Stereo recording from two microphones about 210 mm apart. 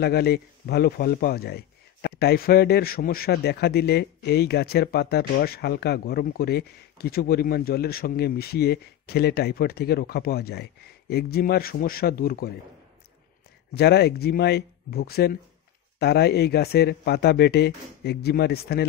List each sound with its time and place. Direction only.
0.0 s a man's voice: 50° left (ahead or behind)
13.7 s a man's voice: 50° left (ahead or behind)